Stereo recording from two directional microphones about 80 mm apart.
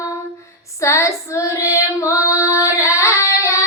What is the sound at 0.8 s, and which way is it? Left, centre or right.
Female singing, left.